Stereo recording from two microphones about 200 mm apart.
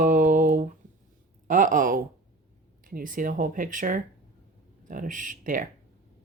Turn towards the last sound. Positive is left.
turn(degrees=-40)  # may be behind; listen again after turning